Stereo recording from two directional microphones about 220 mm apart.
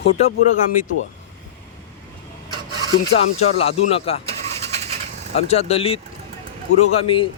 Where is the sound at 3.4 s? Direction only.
25° left (ahead or behind).